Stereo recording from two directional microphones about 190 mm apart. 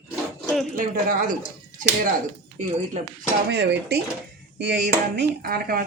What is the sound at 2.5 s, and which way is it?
Speech, 35° right (ahead or behind).